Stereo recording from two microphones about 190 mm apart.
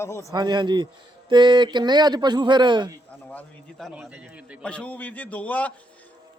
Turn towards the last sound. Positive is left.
turn(degrees=10)  # may be behind; listen again after turning